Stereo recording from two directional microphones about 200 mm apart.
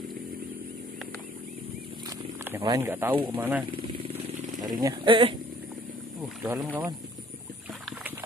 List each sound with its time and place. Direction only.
2.6 s speech: 15° right (ahead or behind)
4.1 s a sound: 20° right (ahead or behind)
6.2 s speech: 10° right (ahead or behind)